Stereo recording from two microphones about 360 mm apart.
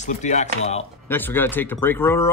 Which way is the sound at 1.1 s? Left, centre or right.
Centre.